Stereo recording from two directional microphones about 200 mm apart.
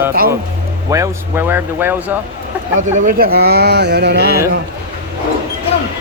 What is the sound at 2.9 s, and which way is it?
Speech, 45° right (ahead or behind).